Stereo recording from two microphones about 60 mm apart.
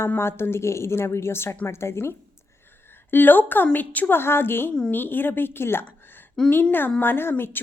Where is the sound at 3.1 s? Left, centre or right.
Left.